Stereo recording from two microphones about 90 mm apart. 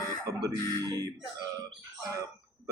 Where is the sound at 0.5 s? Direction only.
40° left (ahead or behind).